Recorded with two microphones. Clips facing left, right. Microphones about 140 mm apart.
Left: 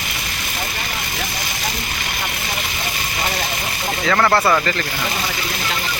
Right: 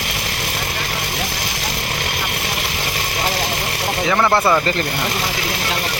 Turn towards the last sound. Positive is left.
turn(degrees=-15)  # may be behind; listen again after turning